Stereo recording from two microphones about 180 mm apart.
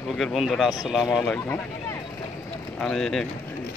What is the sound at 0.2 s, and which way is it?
Speech, centre (ahead or behind).